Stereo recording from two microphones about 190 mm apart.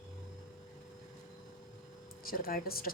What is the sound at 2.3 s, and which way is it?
Speech, 50° left (ahead or behind).